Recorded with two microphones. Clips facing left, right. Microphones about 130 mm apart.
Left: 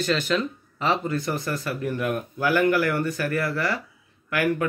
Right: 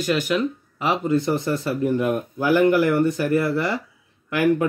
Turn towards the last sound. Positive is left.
turn(degrees=-25)  # may be behind; listen again after turning